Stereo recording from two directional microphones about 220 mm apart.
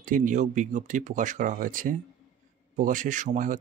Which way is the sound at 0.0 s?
35° right (ahead or behind).